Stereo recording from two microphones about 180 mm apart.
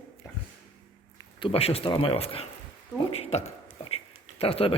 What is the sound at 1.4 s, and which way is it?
Speech, 35° left (ahead or behind).